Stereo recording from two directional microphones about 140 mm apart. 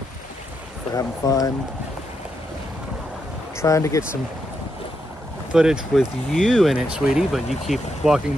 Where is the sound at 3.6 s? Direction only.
20° left (ahead or behind).